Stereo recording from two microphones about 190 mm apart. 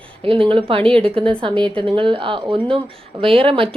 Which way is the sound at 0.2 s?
30° right (ahead or behind).